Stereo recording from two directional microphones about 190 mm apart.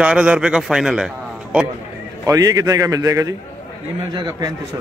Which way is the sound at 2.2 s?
20° right (ahead or behind).